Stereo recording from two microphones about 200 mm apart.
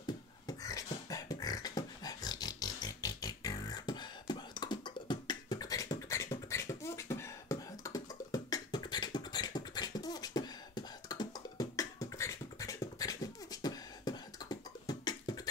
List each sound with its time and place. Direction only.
0.0 s beatboxing: 20° left (ahead or behind)